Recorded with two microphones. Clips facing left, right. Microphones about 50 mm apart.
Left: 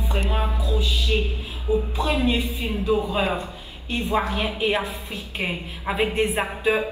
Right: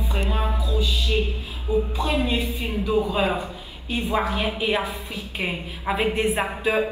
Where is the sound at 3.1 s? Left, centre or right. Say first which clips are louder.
Right 1 dB; centre.